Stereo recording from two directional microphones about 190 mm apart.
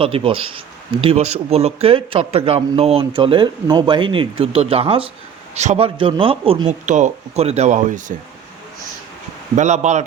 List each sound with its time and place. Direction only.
0.0 s speech: 30° right (ahead or behind)
9.6 s speech: 35° right (ahead or behind)